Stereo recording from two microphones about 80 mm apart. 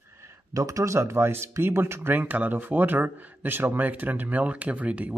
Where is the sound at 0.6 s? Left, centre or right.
Right.